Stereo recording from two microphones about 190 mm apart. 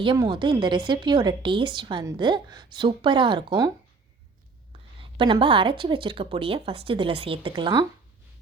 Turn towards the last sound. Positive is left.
turn(degrees=-20)  # may be behind; listen again after turning